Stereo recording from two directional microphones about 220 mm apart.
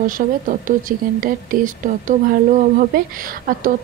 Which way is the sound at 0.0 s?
35° right (ahead or behind).